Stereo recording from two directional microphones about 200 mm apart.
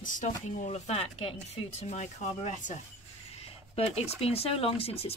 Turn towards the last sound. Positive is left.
turn(degrees=30)  # may be behind; listen again after turning